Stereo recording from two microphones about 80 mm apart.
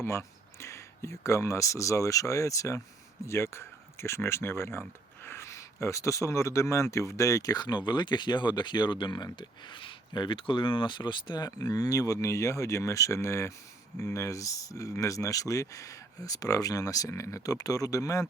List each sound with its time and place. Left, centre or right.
0.0 s speech: left